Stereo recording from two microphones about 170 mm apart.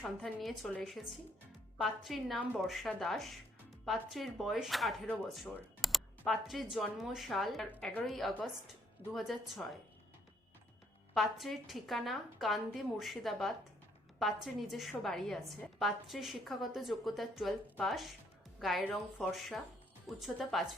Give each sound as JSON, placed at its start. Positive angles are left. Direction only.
{"t": 0.0, "sound": "speech", "side_deg": 0}
{"t": 11.1, "sound": "speech", "side_deg": 0}